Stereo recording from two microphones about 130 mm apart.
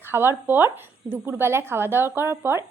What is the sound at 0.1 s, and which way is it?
A woman's voice, 15° right (ahead or behind).